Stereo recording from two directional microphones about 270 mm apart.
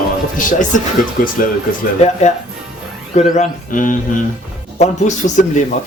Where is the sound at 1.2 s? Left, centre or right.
Left.